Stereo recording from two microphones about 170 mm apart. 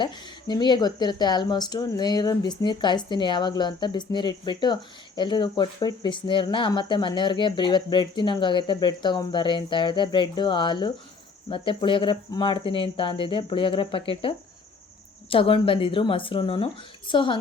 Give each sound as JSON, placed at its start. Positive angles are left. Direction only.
{"t": 0.0, "sound": "speech", "side_deg": 25}